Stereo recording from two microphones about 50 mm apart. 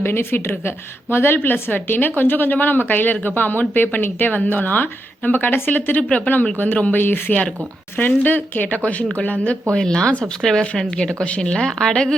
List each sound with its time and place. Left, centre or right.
0.0 s a woman's voice: left
9.7 s speech: centre
10.4 s speech: centre
11.2 s speech: left